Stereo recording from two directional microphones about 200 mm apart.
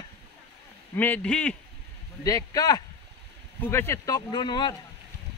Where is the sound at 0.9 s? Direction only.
10° left (ahead or behind).